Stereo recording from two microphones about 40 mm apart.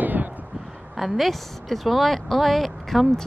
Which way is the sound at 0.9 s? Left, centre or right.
Centre.